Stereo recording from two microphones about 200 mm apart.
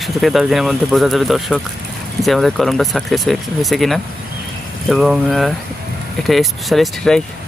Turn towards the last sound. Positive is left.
turn(degrees=0)  # may be behind; listen again after turning